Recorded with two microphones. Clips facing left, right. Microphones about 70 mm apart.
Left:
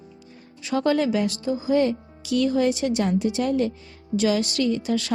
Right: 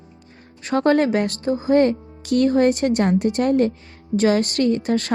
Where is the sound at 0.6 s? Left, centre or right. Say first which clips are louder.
Right 4 dB; right.